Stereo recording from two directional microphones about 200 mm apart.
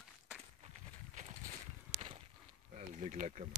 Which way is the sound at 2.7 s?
40° right (ahead or behind).